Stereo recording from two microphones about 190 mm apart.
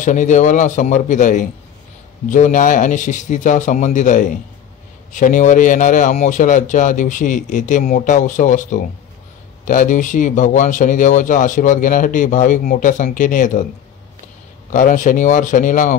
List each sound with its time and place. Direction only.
0.0 s a man's voice: 40° left (ahead or behind)
14.7 s speech: 45° left (ahead or behind)